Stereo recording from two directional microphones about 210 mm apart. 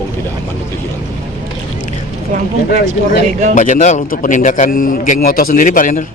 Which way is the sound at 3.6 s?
35° left (ahead or behind).